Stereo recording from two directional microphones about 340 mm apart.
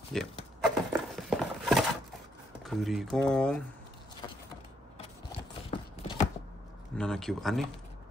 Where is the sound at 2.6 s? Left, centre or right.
Centre.